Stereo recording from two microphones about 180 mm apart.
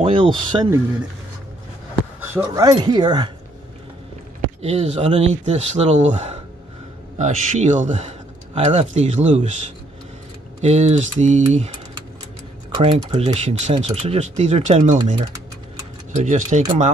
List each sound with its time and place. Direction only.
0.0 s speech: 30° right (ahead or behind)
2.3 s speech: 20° right (ahead or behind)
4.6 s speech: 35° right (ahead or behind)
10.6 s speech: 35° right (ahead or behind)
12.7 s speech: 30° right (ahead or behind)
16.2 s speech: 40° right (ahead or behind)